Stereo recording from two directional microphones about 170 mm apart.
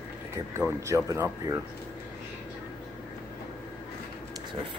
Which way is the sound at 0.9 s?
15° right (ahead or behind).